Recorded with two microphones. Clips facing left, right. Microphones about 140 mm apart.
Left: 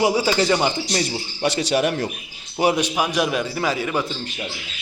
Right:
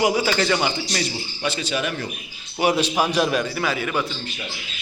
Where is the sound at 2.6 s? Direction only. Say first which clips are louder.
Even; 20° left (ahead or behind).